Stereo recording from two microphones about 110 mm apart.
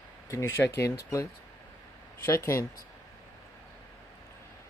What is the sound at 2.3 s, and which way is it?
Speech, 25° left (ahead or behind).